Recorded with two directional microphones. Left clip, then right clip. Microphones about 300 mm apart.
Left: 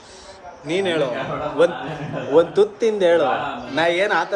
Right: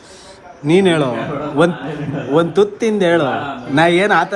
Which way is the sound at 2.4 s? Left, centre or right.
Centre.